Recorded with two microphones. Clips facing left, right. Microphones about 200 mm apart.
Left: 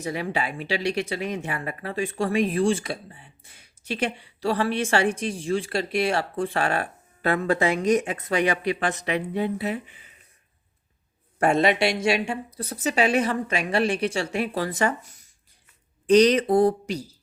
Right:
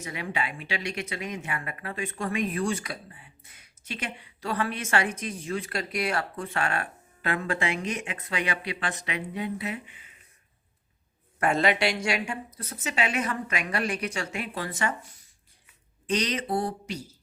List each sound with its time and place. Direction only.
0.0 s speech: 35° left (ahead or behind)
9.3 s speech: 35° left (ahead or behind)
11.3 s speech: 25° left (ahead or behind)
16.0 s speech: 40° left (ahead or behind)